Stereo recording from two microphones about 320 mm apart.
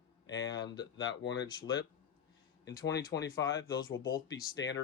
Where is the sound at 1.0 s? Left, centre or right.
Left.